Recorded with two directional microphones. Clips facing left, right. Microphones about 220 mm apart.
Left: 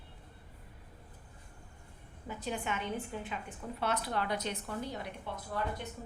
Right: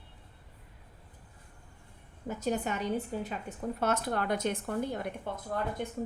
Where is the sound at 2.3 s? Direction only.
45° right (ahead or behind).